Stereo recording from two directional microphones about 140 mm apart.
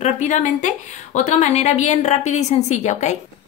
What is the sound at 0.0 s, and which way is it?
A woman's voice, 55° left (ahead or behind).